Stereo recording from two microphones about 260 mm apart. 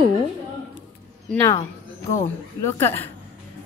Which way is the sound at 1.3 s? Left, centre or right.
Centre.